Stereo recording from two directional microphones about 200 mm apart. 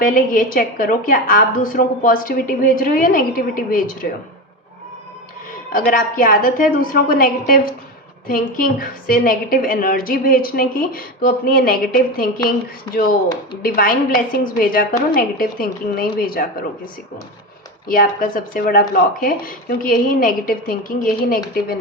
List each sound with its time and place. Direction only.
0.0 s a woman's voice: 40° left (ahead or behind)
5.7 s a woman's voice: 45° left (ahead or behind)